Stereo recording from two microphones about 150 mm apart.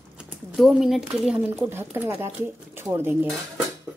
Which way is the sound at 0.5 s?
Centre (ahead or behind).